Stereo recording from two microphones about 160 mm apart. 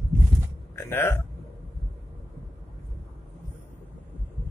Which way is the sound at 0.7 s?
15° left (ahead or behind).